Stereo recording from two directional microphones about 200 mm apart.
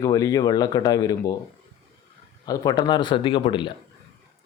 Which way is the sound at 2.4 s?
20° left (ahead or behind).